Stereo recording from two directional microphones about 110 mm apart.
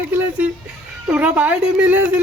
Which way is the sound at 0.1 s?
15° right (ahead or behind).